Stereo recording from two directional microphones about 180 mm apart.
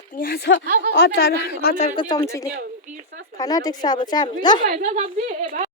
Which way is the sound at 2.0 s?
20° left (ahead or behind).